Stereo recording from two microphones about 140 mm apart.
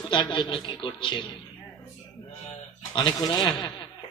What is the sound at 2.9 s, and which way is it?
Speech, 30° left (ahead or behind).